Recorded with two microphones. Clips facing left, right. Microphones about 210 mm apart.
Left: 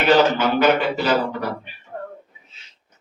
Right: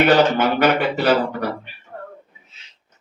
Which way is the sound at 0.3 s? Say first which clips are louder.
Even; 55° right (ahead or behind).